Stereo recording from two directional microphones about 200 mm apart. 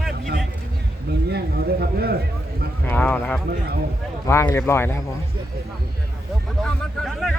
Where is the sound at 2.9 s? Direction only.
10° left (ahead or behind).